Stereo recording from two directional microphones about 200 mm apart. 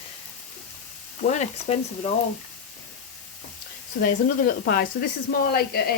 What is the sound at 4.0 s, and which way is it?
Speech, 50° left (ahead or behind).